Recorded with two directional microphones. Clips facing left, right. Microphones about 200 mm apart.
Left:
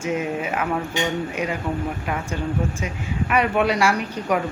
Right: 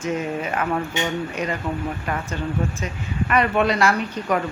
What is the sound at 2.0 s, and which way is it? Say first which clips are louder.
Speech: left 1 dB; 5° left (ahead or behind).